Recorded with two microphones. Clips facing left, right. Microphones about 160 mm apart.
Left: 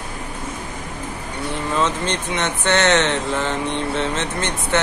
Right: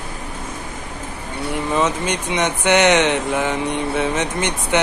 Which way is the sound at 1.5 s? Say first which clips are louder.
Right 2 dB; 10° right (ahead or behind).